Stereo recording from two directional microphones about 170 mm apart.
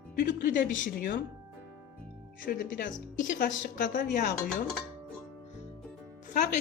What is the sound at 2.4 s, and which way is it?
Speech, 55° left (ahead or behind).